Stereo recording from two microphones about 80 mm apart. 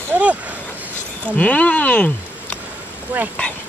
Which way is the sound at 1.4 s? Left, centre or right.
Centre.